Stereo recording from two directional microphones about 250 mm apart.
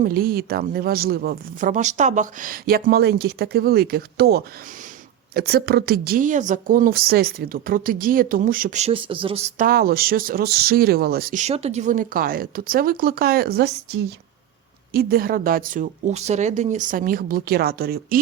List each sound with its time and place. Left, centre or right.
0.0 s speech: right